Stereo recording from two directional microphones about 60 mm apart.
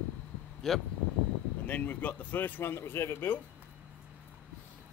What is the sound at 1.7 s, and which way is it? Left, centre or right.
Speech, left.